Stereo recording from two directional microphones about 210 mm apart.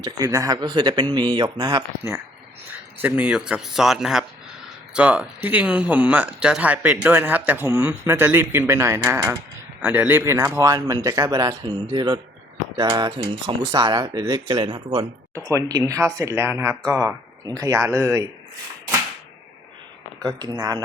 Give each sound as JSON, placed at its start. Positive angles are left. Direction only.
{"t": 0.0, "sound": "speech", "side_deg": -15}
{"t": 20.2, "sound": "speech", "side_deg": -20}